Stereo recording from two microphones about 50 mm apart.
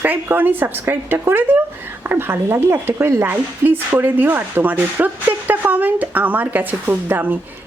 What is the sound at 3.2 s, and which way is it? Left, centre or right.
Speech, right.